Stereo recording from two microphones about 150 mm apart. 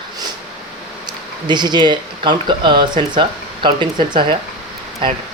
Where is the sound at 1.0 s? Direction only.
30° right (ahead or behind).